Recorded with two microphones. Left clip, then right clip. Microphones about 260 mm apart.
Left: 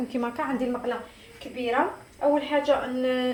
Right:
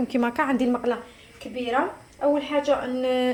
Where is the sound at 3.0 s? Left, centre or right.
Right.